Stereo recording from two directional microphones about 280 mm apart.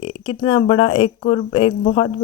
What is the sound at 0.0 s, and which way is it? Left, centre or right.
Speech, centre.